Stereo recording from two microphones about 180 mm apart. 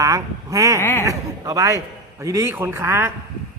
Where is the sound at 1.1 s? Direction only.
20° right (ahead or behind).